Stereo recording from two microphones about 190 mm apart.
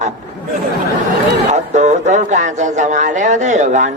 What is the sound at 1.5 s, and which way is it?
A man's voice, 40° right (ahead or behind).